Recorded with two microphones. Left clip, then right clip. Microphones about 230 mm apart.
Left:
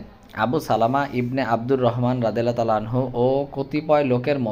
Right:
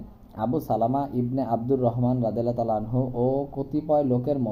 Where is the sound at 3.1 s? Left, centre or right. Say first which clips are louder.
Left 5 dB; centre.